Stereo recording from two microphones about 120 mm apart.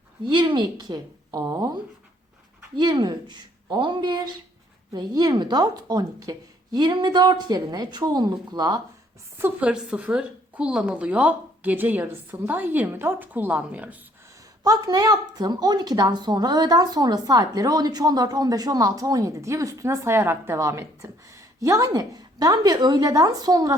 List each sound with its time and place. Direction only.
0.3 s a woman's voice: 40° right (ahead or behind)
9.4 s a woman's voice: 10° right (ahead or behind)
14.6 s a woman's voice: 30° right (ahead or behind)